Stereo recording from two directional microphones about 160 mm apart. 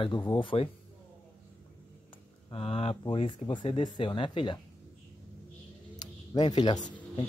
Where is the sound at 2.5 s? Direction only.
35° left (ahead or behind).